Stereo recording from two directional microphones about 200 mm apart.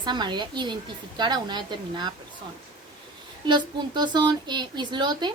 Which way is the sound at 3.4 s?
20° right (ahead or behind).